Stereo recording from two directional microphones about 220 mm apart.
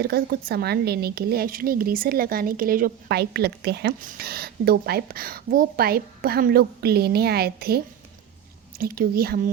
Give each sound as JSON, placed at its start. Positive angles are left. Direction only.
{"t": 0.0, "sound": "speech", "side_deg": -45}
{"t": 8.8, "sound": "speech", "side_deg": -40}